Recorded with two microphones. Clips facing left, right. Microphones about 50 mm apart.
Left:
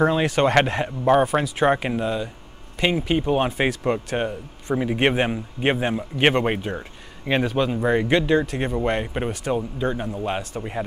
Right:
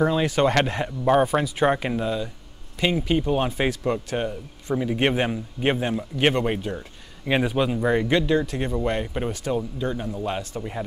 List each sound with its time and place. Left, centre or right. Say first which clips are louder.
0.1 s a man's voice: left 2 dB; left
7.2 s a man's voice: left 1 dB; centre
7.7 s speech: left 1 dB; centre
8.0 s a man's voice: left 2 dB; left